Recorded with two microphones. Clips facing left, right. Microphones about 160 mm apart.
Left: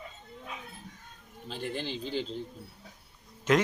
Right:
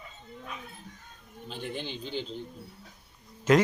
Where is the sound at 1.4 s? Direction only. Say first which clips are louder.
Left 1 dB; centre (ahead or behind).